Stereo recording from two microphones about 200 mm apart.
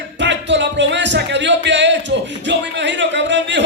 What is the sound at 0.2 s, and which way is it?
Music, 60° right (ahead or behind).